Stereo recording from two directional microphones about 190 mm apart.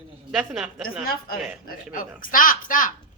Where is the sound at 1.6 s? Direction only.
45° left (ahead or behind).